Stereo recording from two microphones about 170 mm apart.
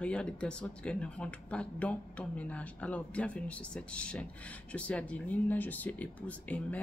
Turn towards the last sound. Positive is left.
turn(degrees=10)  # may be behind; listen again after turning